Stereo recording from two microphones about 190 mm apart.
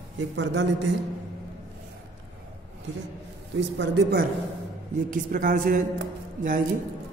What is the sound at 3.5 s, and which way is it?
Speech, 65° right (ahead or behind).